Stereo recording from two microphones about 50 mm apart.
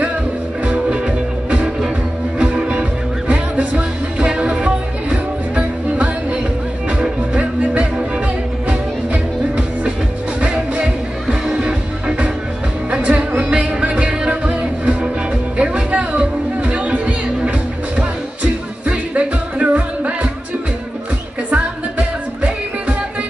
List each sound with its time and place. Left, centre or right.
0.7 s music: right
21.5 s music: right